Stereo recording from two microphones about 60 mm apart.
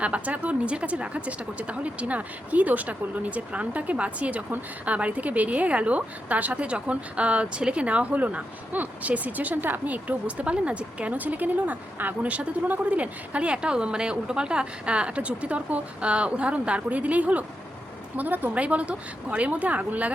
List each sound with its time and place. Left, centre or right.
0.0 s a woman's voice: right